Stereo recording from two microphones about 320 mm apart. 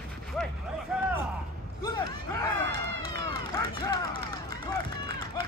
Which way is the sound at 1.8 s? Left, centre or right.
Centre.